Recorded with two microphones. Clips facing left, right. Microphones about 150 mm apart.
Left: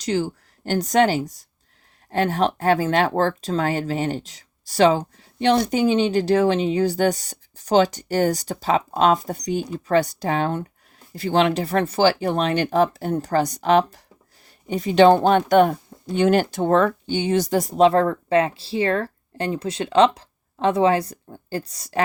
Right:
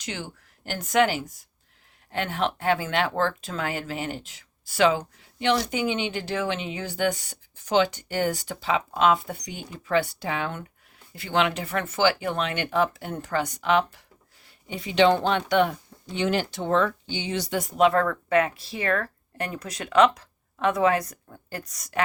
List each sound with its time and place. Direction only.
0.0 s speech: 40° left (ahead or behind)